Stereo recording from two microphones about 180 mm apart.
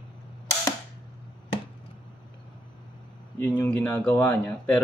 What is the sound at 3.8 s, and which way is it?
Speech, 10° left (ahead or behind).